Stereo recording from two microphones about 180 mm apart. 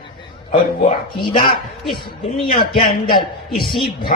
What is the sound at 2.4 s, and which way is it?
Speech, 30° left (ahead or behind).